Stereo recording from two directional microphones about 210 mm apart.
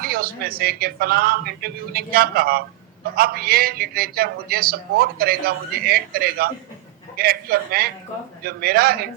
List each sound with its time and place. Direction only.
0.0 s a man's voice: 45° right (ahead or behind)